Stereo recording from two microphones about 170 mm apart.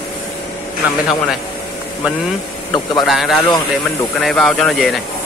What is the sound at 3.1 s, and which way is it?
Speech, centre (ahead or behind).